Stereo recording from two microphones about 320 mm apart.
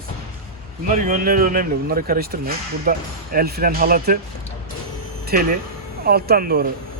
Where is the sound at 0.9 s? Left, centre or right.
Right.